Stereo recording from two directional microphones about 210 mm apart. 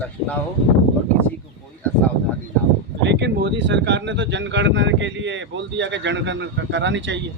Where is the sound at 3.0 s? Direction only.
55° right (ahead or behind).